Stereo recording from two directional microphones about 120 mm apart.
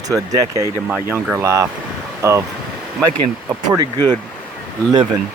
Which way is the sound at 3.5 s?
30° right (ahead or behind).